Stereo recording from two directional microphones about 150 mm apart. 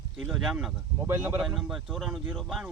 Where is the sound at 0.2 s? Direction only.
5° right (ahead or behind).